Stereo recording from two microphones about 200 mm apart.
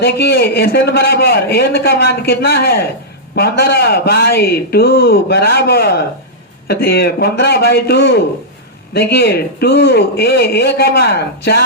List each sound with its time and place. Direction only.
0.0 s a man's voice: 55° left (ahead or behind)